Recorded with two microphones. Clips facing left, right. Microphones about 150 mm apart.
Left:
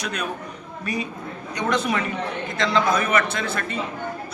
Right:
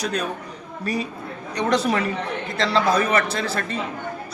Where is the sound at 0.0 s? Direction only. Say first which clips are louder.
Right 3 dB; 35° right (ahead or behind).